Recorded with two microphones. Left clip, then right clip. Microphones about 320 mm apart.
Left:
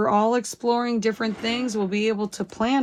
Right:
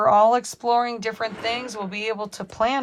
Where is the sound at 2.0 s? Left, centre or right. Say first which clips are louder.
Left 2 dB; right.